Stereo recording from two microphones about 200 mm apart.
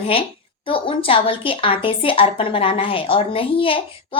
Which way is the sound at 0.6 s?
25° left (ahead or behind).